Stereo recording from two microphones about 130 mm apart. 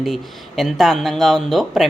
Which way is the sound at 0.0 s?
Centre (ahead or behind).